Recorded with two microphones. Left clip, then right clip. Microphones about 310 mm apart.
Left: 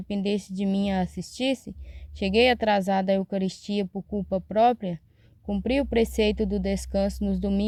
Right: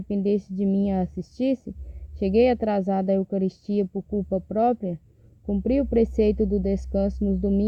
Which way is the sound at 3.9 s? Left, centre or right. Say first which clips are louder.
Right 4 dB; left.